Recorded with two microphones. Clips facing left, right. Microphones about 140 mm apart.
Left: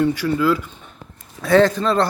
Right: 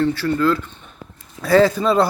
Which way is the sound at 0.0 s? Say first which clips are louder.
Even; 15° left (ahead or behind).